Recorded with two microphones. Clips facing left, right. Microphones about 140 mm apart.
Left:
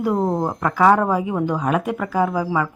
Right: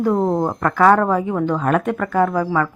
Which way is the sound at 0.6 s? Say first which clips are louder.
Right 1 dB; 10° left (ahead or behind).